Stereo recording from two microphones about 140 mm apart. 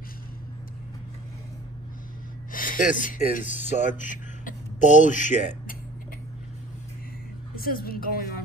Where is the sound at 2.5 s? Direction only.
75° left (ahead or behind).